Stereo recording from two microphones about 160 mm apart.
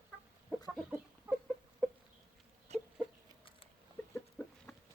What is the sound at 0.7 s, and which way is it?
Chicken, 5° right (ahead or behind).